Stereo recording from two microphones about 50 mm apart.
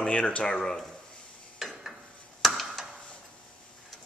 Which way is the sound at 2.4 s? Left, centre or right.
Centre.